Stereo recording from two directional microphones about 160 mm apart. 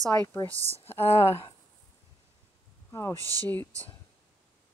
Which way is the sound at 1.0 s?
40° left (ahead or behind).